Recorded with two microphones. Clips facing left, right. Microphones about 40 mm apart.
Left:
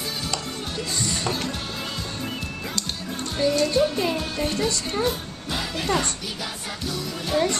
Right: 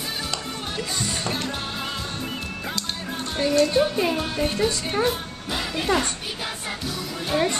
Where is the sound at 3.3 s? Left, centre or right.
Right.